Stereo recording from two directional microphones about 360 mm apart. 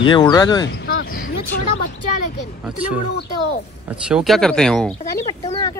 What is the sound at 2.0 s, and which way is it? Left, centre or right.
Speech, left.